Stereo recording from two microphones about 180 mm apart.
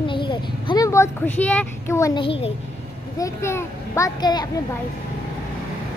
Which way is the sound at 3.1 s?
15° left (ahead or behind).